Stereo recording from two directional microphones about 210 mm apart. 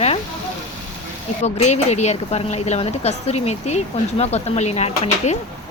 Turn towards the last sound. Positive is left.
turn(degrees=30)  # may be behind; listen again after turning